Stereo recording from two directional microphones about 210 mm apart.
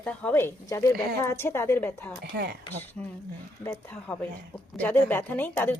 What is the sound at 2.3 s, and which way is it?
Speech, 50° right (ahead or behind).